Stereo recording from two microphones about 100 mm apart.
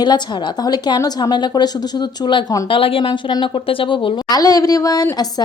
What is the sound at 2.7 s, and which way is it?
Speech, 65° left (ahead or behind).